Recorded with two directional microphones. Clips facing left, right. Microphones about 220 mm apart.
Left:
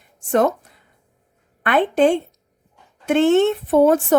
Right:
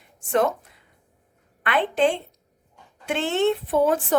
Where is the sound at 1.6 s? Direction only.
45° left (ahead or behind).